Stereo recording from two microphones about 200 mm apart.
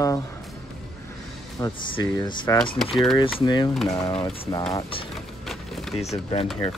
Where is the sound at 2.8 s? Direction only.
Centre (ahead or behind).